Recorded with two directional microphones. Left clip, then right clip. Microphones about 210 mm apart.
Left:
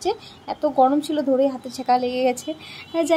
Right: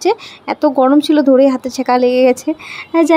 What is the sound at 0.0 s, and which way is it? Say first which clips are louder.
Speech: right 10 dB; 30° right (ahead or behind).